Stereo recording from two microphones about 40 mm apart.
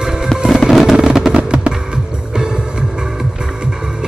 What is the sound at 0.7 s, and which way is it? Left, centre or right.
Music, centre.